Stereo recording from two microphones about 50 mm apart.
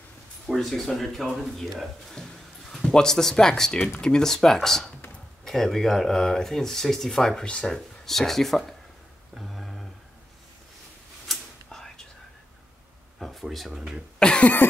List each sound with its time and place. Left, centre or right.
0.6 s speech: centre
9.3 s a sound: centre
11.2 s whispering: centre
13.2 s a sound: centre
13.7 s speech: centre
14.4 s cough: left